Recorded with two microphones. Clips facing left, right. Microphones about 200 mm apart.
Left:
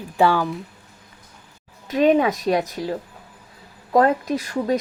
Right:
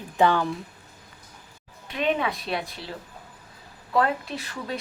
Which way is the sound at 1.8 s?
40° left (ahead or behind).